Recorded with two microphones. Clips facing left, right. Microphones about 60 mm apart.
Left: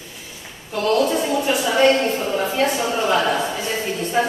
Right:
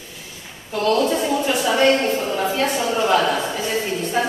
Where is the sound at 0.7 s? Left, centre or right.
Centre.